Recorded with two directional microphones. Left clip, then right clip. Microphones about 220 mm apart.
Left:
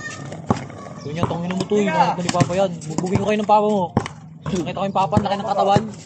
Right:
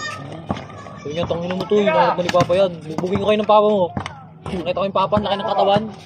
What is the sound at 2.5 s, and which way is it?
Speech, 20° right (ahead or behind).